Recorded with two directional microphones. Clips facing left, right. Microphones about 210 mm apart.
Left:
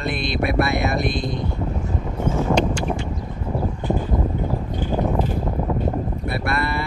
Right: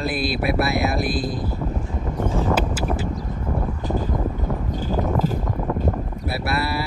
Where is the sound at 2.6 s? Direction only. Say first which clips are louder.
Left 2 dB; 5° right (ahead or behind).